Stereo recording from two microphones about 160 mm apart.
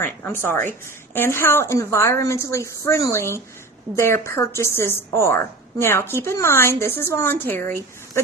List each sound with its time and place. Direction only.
0.0 s a woman's voice: 15° left (ahead or behind)